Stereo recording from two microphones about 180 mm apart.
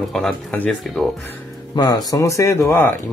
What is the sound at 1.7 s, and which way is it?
Speech, 20° left (ahead or behind).